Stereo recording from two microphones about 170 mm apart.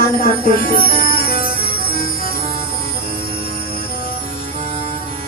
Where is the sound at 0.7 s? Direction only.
60° left (ahead or behind).